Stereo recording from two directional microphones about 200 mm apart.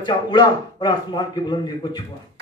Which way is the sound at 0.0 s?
20° left (ahead or behind).